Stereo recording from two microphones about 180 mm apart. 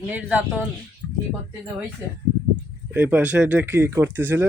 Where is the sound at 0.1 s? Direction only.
5° right (ahead or behind).